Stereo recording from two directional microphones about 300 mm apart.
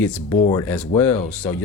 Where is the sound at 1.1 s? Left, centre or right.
Left.